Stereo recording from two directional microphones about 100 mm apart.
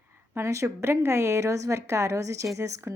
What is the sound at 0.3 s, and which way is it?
A woman's voice, 30° right (ahead or behind).